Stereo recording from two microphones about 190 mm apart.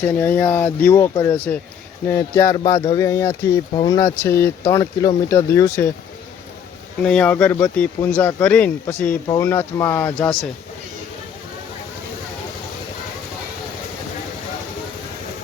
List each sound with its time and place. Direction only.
0.0 s speech: 10° left (ahead or behind)
7.0 s speech: 5° left (ahead or behind)